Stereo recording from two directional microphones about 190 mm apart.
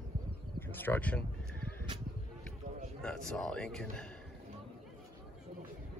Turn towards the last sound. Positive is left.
turn(degrees=5)  # may be behind; listen again after turning